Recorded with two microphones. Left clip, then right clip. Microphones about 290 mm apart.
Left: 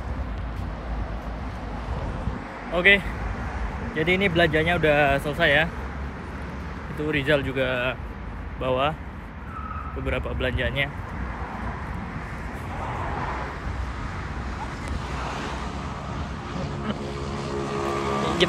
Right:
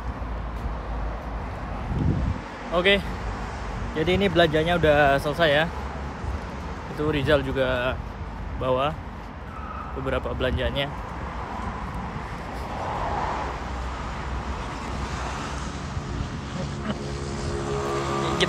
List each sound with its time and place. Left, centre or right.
2.7 s speech: centre
7.0 s speech: centre
10.0 s speech: centre
13.0 s vehicle: right
15.2 s vehicle: left
17.3 s music: left